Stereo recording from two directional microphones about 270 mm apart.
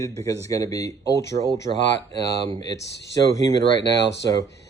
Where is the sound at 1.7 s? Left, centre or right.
Right.